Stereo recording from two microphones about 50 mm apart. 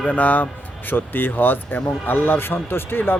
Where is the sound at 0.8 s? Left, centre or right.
Left.